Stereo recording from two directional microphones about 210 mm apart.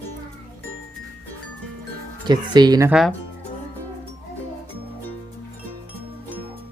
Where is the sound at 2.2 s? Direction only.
20° right (ahead or behind).